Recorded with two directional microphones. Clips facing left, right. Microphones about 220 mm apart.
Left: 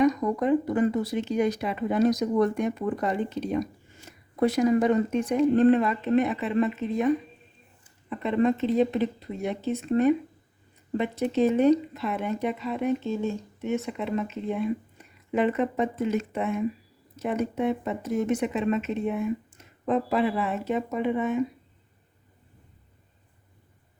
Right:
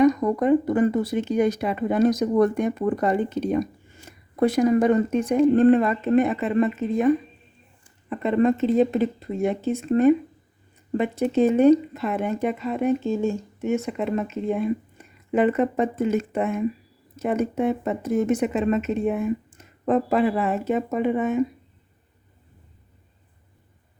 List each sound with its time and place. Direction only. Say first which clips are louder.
0.0 s speech: right 4 dB; 55° right (ahead or behind)
8.2 s speech: right 4 dB; 50° right (ahead or behind)